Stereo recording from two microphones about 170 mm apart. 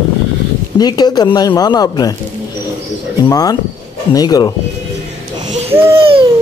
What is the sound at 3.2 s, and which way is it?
Speech, 20° left (ahead or behind).